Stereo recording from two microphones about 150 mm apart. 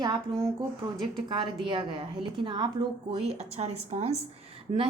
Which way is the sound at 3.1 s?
45° right (ahead or behind).